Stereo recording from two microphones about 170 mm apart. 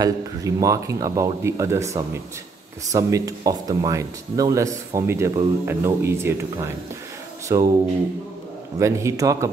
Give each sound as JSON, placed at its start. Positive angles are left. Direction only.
{"t": 0.0, "sound": "speech", "side_deg": -20}
{"t": 8.7, "sound": "speech", "side_deg": -15}